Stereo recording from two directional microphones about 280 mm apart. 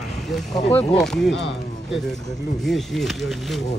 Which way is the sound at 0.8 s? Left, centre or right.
Centre.